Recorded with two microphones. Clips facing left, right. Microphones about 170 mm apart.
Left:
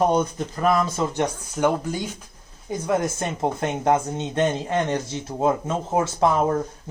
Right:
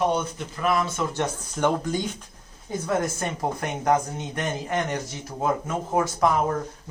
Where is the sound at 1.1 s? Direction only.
10° left (ahead or behind).